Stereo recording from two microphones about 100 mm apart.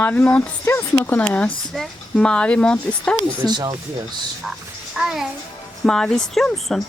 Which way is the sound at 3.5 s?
45° right (ahead or behind).